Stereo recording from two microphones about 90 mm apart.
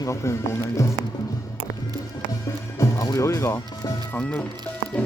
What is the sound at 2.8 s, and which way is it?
Music, 35° left (ahead or behind).